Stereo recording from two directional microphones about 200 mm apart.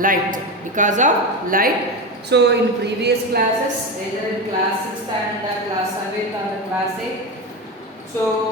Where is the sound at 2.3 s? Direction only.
55° right (ahead or behind).